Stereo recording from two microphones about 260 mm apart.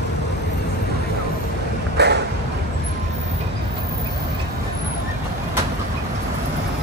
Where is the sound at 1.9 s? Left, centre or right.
Right.